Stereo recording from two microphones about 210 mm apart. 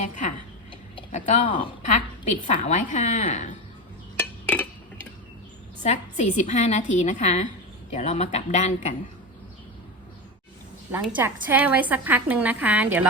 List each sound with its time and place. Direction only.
0.0 s a sound: 35° left (ahead or behind)
0.9 s a woman's voice: 35° left (ahead or behind)
4.2 s chink: 5° left (ahead or behind)
5.8 s a woman's voice: 35° left (ahead or behind)
11.0 s a woman's voice: 10° right (ahead or behind)